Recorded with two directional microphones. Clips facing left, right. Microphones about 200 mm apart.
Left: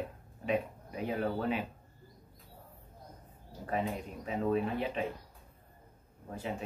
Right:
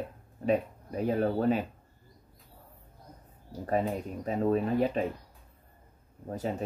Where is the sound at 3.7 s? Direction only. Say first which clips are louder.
Right 5 dB; 40° right (ahead or behind).